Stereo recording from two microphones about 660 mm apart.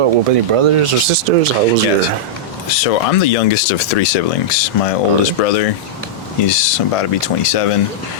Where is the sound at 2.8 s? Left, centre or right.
Left.